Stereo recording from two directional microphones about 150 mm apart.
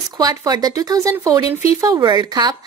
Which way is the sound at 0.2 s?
25° right (ahead or behind).